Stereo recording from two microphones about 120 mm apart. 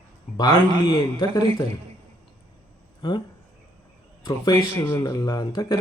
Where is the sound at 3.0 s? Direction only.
40° left (ahead or behind).